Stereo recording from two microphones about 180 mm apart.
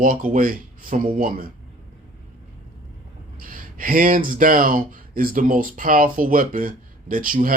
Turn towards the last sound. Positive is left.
turn(degrees=-50)  # may be behind; listen again after turning